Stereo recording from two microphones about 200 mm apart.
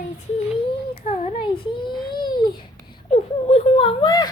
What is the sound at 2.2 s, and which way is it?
Babbling, 20° left (ahead or behind).